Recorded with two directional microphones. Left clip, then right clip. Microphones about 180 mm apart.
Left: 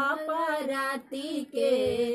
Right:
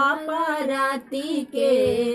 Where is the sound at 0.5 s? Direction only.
15° left (ahead or behind).